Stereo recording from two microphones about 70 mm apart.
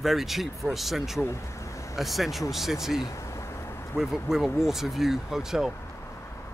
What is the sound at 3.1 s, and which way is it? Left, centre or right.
Vehicle, left.